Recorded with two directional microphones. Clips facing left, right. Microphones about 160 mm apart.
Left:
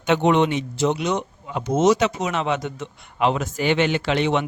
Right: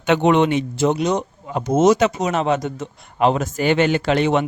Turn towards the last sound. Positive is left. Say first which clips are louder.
# right 3 dB
turn(degrees=-45)  # may be behind; listen again after turning